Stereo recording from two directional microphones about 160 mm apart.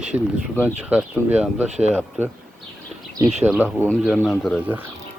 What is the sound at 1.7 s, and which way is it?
Speech, 45° right (ahead or behind).